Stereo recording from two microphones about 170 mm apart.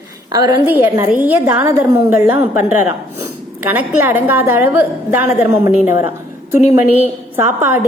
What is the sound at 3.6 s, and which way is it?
A woman's voice, 10° right (ahead or behind).